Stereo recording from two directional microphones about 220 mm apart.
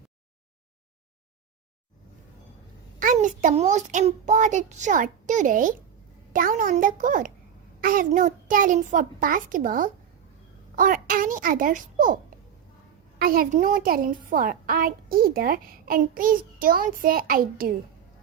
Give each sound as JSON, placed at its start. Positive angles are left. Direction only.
{"t": 3.0, "sound": "a child's voice", "side_deg": -35}